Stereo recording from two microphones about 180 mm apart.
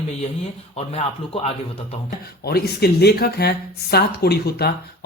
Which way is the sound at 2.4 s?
60° left (ahead or behind).